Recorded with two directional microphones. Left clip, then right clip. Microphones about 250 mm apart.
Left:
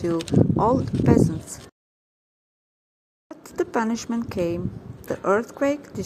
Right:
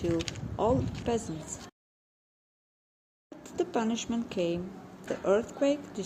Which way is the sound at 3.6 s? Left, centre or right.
Centre.